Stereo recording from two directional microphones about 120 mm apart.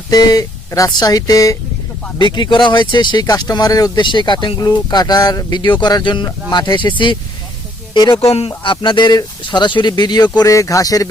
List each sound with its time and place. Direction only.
0.1 s speech: 30° left (ahead or behind)
2.1 s speech: 40° left (ahead or behind)
8.3 s speech: 50° left (ahead or behind); by 11.1 s 30° left (ahead or behind)